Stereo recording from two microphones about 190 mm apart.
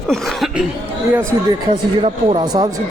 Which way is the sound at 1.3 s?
20° right (ahead or behind).